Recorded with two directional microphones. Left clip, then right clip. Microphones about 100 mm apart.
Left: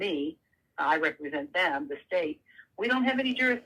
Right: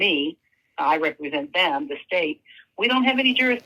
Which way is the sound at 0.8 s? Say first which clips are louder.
Right 5 dB; 30° right (ahead or behind).